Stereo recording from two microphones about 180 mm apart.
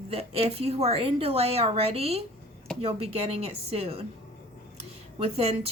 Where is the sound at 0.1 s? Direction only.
35° right (ahead or behind).